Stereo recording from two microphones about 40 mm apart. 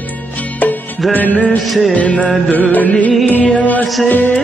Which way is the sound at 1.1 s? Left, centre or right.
Left.